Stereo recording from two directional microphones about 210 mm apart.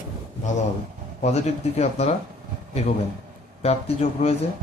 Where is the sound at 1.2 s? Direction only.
30° left (ahead or behind).